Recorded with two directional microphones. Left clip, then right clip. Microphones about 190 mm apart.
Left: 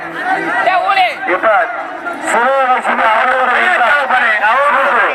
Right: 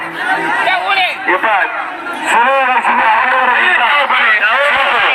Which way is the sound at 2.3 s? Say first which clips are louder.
Right 1 dB; 45° left (ahead or behind).